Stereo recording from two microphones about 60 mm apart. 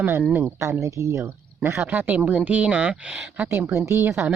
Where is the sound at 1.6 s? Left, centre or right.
Right.